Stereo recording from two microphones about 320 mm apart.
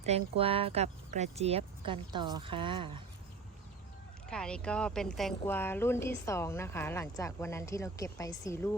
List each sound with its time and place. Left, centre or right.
0.0 s speech: centre
4.3 s speech: centre